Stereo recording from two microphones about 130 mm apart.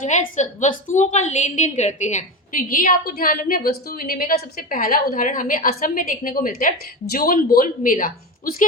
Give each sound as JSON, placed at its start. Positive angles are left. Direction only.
{"t": 0.0, "sound": "a woman's voice", "side_deg": 70}